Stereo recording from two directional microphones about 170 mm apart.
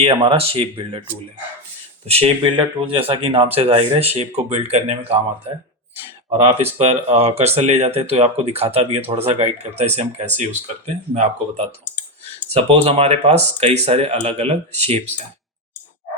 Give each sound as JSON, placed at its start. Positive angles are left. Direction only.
{"t": 0.0, "sound": "speech", "side_deg": -30}
{"t": 2.0, "sound": "speech", "side_deg": -35}
{"t": 6.4, "sound": "speech", "side_deg": -40}